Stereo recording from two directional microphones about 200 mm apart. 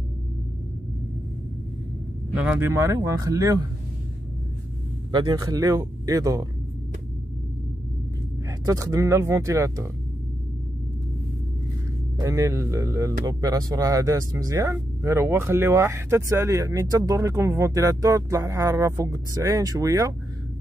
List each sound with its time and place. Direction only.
2.4 s speech: 10° right (ahead or behind)
5.1 s speech: 20° right (ahead or behind)
8.5 s speech: 15° right (ahead or behind)
12.2 s speech: 15° right (ahead or behind)